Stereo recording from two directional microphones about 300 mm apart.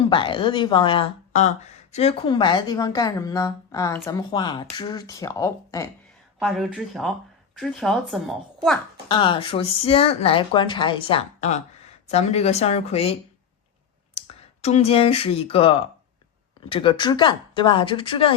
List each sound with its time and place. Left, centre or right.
0.0 s speech: centre
6.4 s speech: centre
9.0 s speech: centre
14.2 s speech: left